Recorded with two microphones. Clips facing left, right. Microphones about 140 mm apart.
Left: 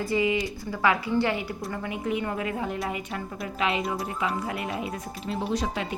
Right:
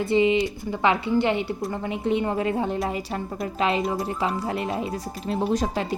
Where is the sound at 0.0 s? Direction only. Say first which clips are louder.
Right 5 dB; 25° right (ahead or behind).